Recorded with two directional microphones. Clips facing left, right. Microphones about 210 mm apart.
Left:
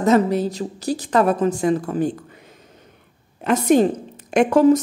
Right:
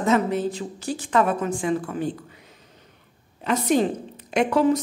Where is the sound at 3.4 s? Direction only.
50° left (ahead or behind).